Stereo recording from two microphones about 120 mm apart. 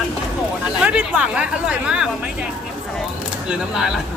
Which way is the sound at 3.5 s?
5° right (ahead or behind).